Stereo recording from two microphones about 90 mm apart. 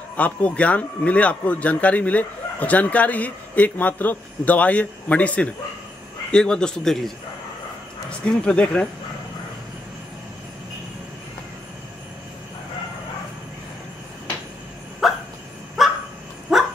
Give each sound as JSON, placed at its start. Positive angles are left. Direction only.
{"t": 0.2, "sound": "speech", "side_deg": 15}
{"t": 8.3, "sound": "speech", "side_deg": 10}
{"t": 15.0, "sound": "dog", "side_deg": -5}